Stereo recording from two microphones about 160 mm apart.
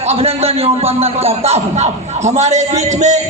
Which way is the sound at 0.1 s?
40° right (ahead or behind).